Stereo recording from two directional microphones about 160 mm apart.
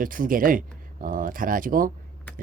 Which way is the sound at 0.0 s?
60° right (ahead or behind).